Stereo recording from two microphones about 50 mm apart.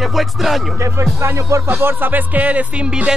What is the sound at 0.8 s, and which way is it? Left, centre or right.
Music, right.